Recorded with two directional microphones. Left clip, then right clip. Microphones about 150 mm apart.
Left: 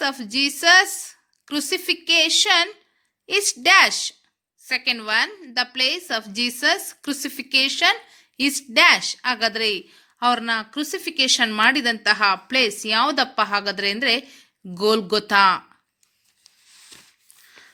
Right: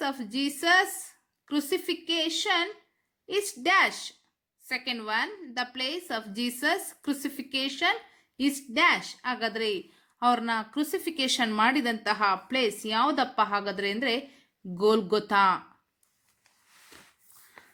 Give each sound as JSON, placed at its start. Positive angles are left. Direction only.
{"t": 0.0, "sound": "a woman's voice", "side_deg": 25}